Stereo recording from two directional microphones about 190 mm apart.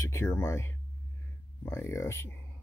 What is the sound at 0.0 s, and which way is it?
Speech, 15° left (ahead or behind).